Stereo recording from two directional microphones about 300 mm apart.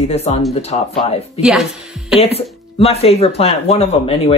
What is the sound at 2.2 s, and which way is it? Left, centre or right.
Speech, centre.